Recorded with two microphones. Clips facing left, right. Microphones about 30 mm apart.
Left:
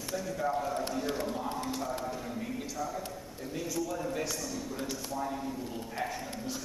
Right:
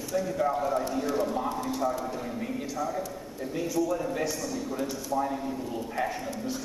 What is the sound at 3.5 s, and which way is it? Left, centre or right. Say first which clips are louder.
Speech: right 6 dB; centre.